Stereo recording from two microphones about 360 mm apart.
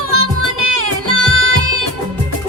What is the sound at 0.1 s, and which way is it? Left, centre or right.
Music, right.